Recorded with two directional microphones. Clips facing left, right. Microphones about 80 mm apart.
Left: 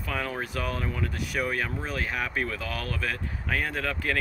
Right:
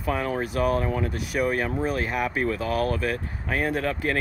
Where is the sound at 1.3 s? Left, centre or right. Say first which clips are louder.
Right 6 dB; right.